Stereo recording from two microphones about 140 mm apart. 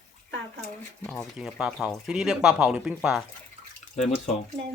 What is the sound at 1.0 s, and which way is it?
Speech, centre (ahead or behind).